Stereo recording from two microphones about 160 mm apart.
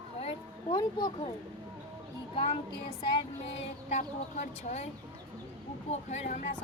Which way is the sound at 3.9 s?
50° left (ahead or behind).